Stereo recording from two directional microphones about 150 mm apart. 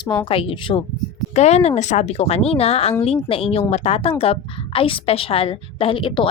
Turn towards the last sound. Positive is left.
turn(degrees=35)  # may be behind; listen again after turning